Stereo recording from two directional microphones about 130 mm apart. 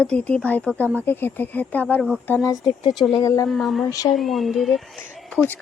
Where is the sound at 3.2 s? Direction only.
25° left (ahead or behind).